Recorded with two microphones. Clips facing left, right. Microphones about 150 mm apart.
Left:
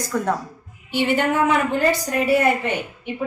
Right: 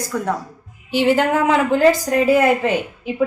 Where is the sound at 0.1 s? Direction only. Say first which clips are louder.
Even; 5° right (ahead or behind).